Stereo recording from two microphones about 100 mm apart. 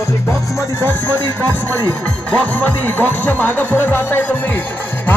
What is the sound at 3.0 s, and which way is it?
Speech, 15° left (ahead or behind).